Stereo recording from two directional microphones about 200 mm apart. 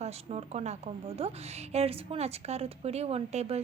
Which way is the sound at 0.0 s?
30° right (ahead or behind).